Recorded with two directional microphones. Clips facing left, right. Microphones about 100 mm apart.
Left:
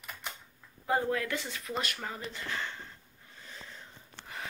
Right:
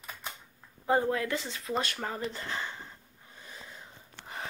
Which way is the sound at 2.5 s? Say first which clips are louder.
Right 1 dB; 15° right (ahead or behind).